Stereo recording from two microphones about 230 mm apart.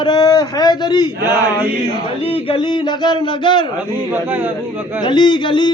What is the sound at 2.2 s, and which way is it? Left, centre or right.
Speech, left.